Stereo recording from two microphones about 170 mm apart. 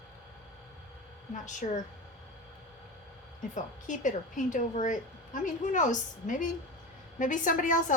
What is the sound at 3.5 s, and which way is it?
A woman's voice, 50° left (ahead or behind).